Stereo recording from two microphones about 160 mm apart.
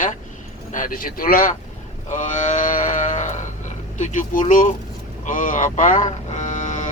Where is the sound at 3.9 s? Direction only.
50° left (ahead or behind).